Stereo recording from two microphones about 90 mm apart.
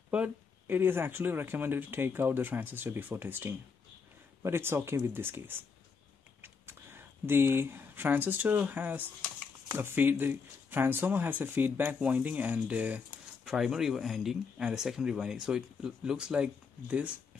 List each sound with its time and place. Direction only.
0.1 s speech: 20° right (ahead or behind)
13.5 s speech: 5° right (ahead or behind)